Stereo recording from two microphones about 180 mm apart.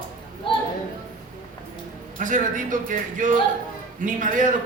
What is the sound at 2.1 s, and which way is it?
A man's voice, 45° right (ahead or behind).